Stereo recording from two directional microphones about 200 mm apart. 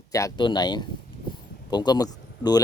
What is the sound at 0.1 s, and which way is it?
Speech, 15° left (ahead or behind).